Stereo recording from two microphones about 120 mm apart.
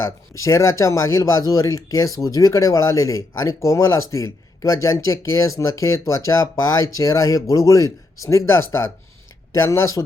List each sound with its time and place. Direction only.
0.0 s speech: 25° left (ahead or behind)